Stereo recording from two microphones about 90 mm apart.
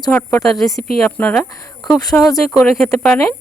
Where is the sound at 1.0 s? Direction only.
20° left (ahead or behind).